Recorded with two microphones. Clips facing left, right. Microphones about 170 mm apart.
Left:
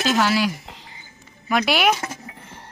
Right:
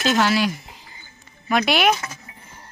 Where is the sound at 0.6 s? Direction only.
75° left (ahead or behind).